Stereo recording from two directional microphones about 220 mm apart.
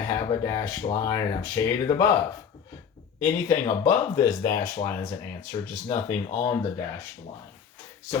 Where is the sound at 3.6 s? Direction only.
15° left (ahead or behind).